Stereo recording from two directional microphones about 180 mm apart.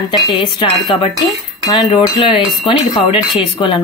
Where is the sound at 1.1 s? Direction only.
Centre (ahead or behind).